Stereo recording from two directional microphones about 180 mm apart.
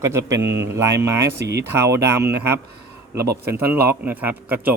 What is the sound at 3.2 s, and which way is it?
Speech, 65° right (ahead or behind).